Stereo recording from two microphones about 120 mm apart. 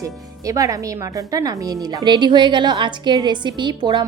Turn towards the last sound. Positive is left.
turn(degrees=-40)  # may be behind; listen again after turning